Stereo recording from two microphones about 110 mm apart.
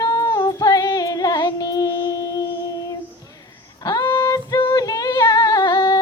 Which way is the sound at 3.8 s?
40° left (ahead or behind).